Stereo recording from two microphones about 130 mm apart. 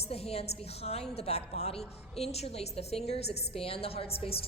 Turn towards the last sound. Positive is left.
turn(degrees=45)  # may be behind; listen again after turning